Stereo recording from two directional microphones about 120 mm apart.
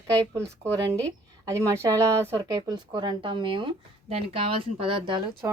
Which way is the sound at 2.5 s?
35° right (ahead or behind).